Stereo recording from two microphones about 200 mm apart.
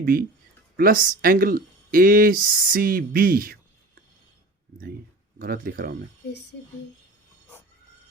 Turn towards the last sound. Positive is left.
turn(degrees=60)  # may be behind; listen again after turning